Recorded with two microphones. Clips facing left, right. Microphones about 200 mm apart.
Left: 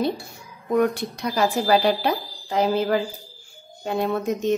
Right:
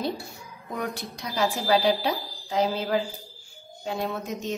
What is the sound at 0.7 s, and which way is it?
Speech, 60° left (ahead or behind).